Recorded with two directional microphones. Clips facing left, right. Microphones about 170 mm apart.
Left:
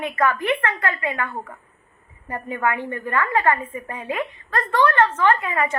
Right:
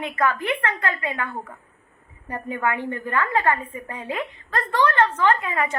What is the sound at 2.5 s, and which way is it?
Speech, 15° right (ahead or behind).